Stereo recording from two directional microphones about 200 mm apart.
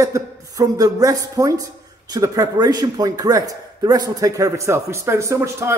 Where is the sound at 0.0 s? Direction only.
15° right (ahead or behind).